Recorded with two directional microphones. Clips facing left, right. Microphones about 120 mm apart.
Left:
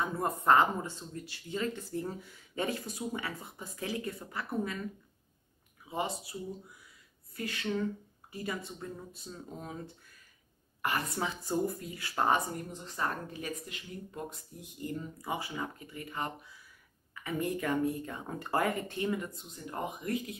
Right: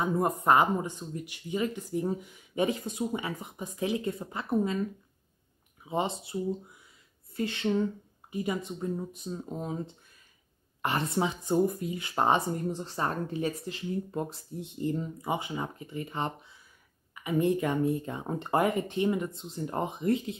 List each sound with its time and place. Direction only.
0.0 s speech: 15° right (ahead or behind)
5.9 s speech: 25° right (ahead or behind)